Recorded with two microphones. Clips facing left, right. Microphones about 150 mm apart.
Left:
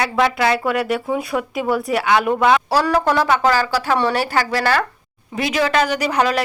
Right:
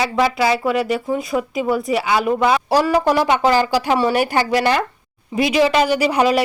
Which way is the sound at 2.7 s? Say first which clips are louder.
Right 2 dB; 15° right (ahead or behind).